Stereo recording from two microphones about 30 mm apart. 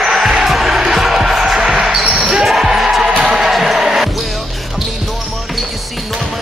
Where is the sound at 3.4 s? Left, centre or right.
Centre.